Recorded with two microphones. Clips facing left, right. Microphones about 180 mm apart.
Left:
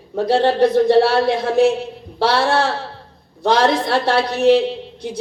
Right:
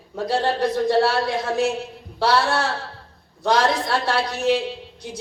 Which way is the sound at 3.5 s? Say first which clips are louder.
Left 4 dB; 60° left (ahead or behind).